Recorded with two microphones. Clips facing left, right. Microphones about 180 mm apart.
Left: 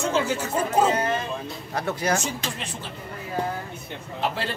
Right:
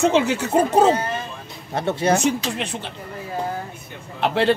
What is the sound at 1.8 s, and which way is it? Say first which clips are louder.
Speech: right 5 dB; 25° right (ahead or behind).